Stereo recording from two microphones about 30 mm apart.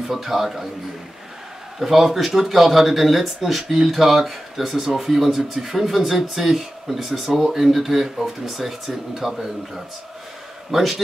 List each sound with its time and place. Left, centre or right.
0.1 s speech: centre
1.8 s a man's voice: centre